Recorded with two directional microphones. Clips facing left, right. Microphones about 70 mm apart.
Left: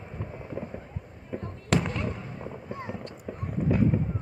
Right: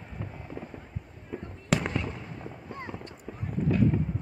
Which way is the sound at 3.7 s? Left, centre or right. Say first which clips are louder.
Left 1 dB; centre.